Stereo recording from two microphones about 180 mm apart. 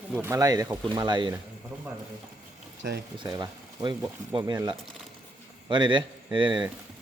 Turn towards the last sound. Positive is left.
turn(degrees=-25)  # may be behind; listen again after turning